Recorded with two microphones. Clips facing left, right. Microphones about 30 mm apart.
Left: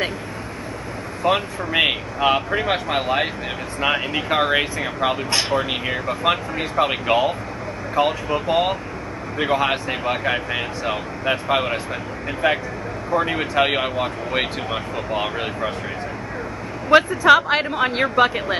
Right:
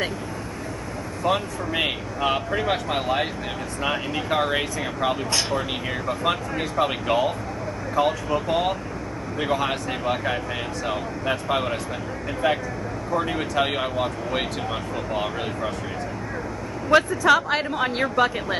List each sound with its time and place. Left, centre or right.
1.2 s speech: left
16.9 s speech: left